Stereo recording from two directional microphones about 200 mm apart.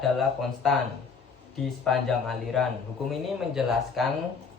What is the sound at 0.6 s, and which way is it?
Speech, centre (ahead or behind).